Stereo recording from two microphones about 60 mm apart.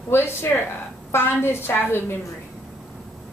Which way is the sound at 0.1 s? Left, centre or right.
Left.